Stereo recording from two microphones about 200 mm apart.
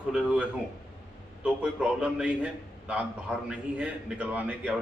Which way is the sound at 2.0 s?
5° right (ahead or behind).